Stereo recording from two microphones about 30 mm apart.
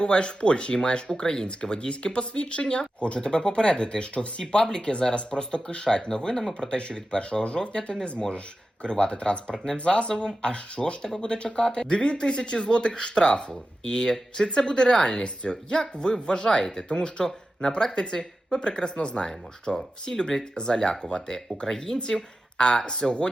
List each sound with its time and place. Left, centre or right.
0.0 s speech: left
16.9 s speech: left
21.7 s speech: centre
22.5 s speech: left